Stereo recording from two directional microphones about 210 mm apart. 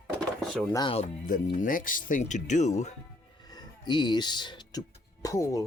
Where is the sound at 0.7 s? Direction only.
25° left (ahead or behind).